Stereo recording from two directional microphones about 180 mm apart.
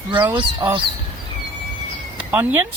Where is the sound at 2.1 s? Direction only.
10° right (ahead or behind).